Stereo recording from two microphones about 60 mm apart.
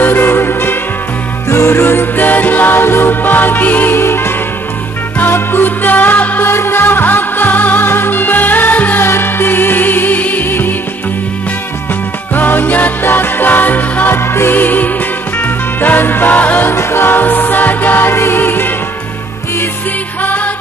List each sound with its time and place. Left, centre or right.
0.0 s music: left
4.0 s music: left
6.5 s music: left
9.0 s music: left
12.4 s music: left
16.7 s music: left
20.2 s music: left